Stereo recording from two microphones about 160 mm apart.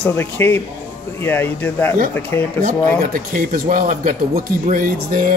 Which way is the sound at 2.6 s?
60° right (ahead or behind).